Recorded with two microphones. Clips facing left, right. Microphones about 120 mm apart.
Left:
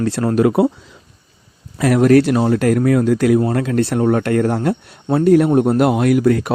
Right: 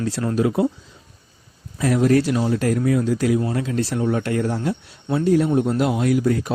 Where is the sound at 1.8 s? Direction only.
70° left (ahead or behind).